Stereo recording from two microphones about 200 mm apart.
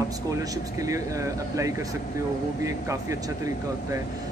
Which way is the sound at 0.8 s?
15° right (ahead or behind).